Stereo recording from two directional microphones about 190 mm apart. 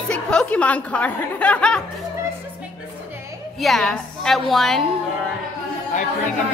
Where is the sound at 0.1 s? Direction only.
5° left (ahead or behind).